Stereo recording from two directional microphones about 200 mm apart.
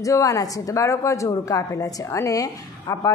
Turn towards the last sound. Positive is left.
turn(degrees=15)  # may be behind; listen again after turning